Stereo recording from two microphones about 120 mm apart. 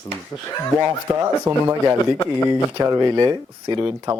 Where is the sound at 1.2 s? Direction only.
25° right (ahead or behind).